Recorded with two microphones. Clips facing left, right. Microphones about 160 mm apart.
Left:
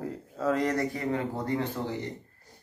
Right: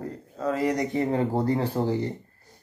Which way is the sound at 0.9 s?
30° right (ahead or behind).